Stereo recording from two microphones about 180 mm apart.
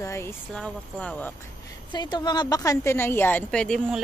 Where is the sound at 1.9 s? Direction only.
25° left (ahead or behind); by 4.0 s centre (ahead or behind).